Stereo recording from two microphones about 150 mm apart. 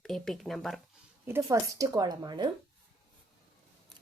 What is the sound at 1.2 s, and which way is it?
Speech, 20° right (ahead or behind).